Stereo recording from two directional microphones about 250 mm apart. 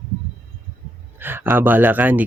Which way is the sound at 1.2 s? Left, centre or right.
Centre.